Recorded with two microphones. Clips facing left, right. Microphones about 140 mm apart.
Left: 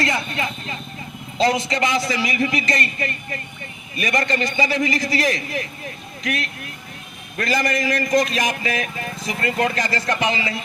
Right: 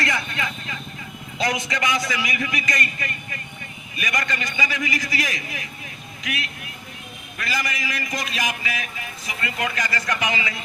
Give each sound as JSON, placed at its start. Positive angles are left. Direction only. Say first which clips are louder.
{"t": 0.0, "sound": "a man's voice", "louder": "left 3 dB", "side_deg": 25}